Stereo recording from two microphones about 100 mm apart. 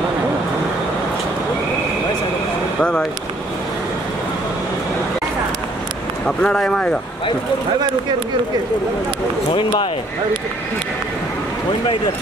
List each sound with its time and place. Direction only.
6.2 s speech: 5° left (ahead or behind)
9.5 s speech: 55° left (ahead or behind)